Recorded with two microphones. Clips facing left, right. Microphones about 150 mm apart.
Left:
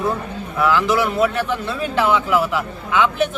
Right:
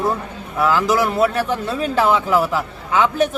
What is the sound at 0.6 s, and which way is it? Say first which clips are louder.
A man's voice: right 1 dB; 40° right (ahead or behind).